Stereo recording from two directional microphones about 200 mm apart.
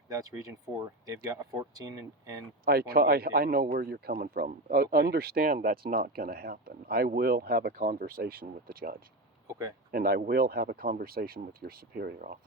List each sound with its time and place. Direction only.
0.1 s speech: 15° right (ahead or behind)
2.6 s speech: 50° right (ahead or behind)